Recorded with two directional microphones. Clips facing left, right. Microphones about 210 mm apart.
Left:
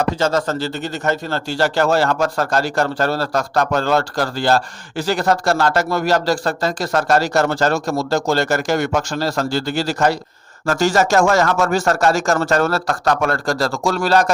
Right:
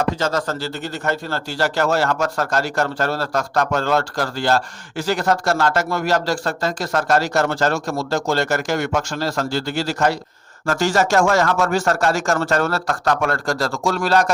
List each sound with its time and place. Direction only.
0.2 s a man's voice: 25° left (ahead or behind)